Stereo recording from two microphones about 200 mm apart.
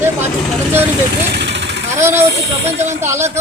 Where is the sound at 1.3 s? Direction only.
60° right (ahead or behind).